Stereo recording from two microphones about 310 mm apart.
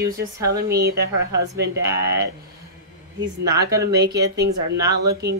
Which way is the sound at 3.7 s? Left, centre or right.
Centre.